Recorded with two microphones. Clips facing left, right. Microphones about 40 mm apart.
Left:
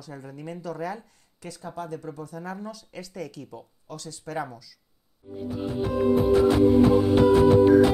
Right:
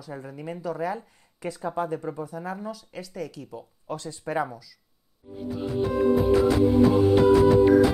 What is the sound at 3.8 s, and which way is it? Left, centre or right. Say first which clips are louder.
Speech: right 7 dB; right.